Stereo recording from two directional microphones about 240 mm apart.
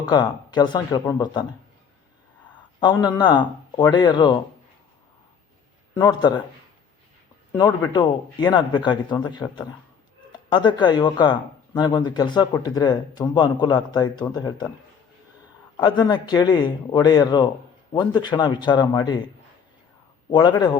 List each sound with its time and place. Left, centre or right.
0.0 s speech: centre
2.6 s speech: centre
5.9 s speech: centre
7.9 s speech: centre
15.8 s speech: centre
20.3 s speech: centre